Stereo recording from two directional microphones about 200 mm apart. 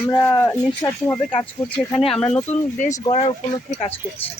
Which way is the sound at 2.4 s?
35° left (ahead or behind).